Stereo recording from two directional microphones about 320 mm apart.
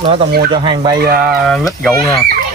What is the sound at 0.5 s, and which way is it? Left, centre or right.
Speech, centre.